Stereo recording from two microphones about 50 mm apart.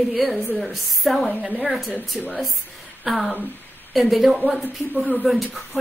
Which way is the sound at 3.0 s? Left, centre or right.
Centre.